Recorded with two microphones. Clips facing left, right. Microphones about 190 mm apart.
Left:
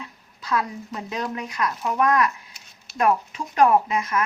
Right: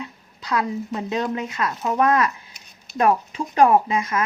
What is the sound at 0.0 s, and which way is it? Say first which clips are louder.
Speech: right 4 dB; 20° right (ahead or behind).